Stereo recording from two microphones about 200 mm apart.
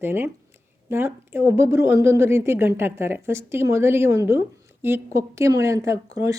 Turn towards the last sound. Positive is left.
turn(degrees=-15)  # may be behind; listen again after turning